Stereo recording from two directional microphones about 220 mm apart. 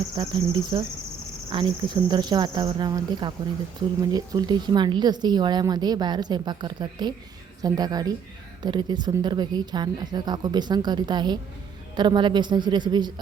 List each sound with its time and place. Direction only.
0.2 s speech: 25° right (ahead or behind)